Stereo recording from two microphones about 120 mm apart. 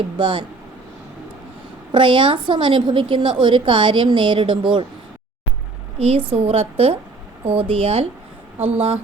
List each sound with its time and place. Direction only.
0.2 s a woman's voice: 45° right (ahead or behind)
1.9 s a woman's voice: 45° right (ahead or behind)
6.0 s a woman's voice: 60° right (ahead or behind)
8.5 s speech: 15° right (ahead or behind)